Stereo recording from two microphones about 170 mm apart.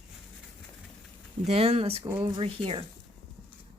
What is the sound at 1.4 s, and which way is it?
Speech, 40° right (ahead or behind).